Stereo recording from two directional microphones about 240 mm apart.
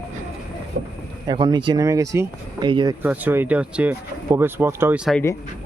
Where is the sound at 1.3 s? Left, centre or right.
Centre.